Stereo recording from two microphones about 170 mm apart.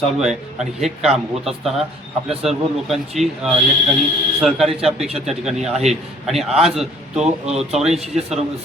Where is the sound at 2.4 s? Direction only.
Centre (ahead or behind).